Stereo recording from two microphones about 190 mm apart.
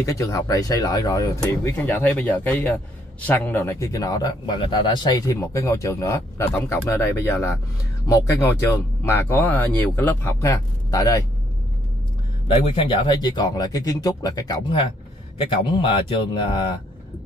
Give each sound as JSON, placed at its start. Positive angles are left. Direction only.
{"t": 0.0, "sound": "speech", "side_deg": 15}
{"t": 12.4, "sound": "speech", "side_deg": 30}